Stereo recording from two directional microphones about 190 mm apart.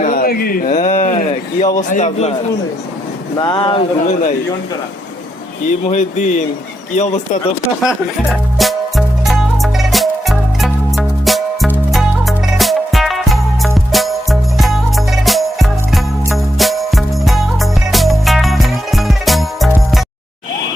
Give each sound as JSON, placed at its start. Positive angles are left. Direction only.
{"t": 0.0, "sound": "a sound", "side_deg": 45}
{"t": 1.9, "sound": "speech", "side_deg": 35}
{"t": 3.3, "sound": "speech", "side_deg": 25}
{"t": 5.9, "sound": "speech", "side_deg": 40}
{"t": 7.9, "sound": "music", "side_deg": 0}